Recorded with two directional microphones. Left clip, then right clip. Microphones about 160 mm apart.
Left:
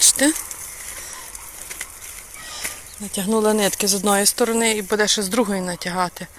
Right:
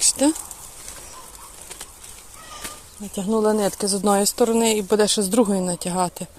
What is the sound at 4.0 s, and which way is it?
Speech, 15° right (ahead or behind).